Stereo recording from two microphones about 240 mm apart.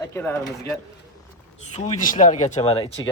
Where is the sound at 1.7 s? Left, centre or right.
Left.